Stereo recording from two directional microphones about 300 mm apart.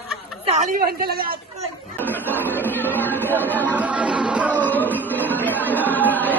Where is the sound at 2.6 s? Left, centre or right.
Centre.